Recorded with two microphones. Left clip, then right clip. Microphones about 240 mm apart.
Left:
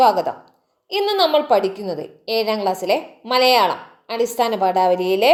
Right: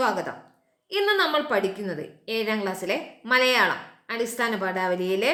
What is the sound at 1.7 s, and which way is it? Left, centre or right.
A woman's voice, centre.